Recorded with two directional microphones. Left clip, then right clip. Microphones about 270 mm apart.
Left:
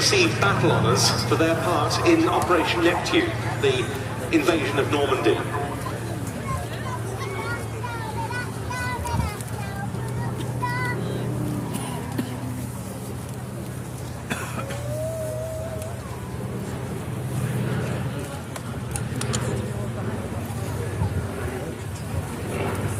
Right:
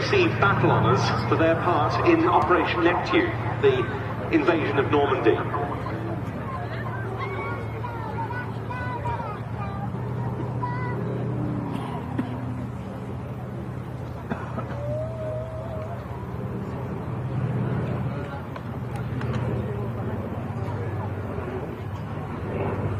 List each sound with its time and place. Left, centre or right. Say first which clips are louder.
0.1 s speech: left 1 dB; left